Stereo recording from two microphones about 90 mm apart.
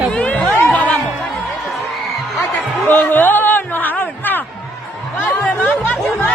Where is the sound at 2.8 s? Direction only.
25° left (ahead or behind).